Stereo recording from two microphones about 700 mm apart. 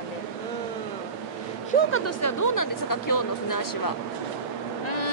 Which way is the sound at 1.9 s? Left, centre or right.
Left.